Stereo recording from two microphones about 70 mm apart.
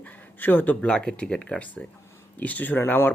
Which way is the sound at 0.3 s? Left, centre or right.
Left.